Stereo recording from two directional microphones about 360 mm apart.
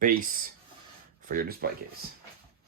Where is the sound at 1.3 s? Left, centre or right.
Right.